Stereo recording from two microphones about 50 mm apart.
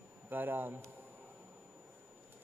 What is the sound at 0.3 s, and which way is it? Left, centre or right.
Speech, right.